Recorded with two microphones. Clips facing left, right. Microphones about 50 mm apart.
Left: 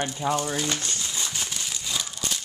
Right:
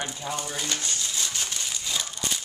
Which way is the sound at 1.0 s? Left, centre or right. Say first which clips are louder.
Even; centre.